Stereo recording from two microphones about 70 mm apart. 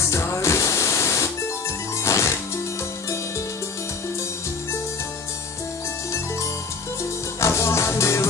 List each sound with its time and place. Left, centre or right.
0.0 s music: left
7.3 s music: left